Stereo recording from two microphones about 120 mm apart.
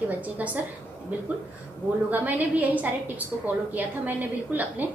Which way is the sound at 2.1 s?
15° right (ahead or behind).